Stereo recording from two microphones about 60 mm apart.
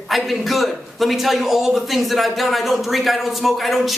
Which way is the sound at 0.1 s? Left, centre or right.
Centre.